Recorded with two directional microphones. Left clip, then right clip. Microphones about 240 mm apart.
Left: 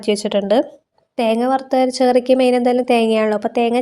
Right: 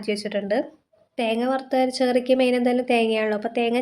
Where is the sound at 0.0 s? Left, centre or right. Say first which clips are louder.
Left 8 dB; left.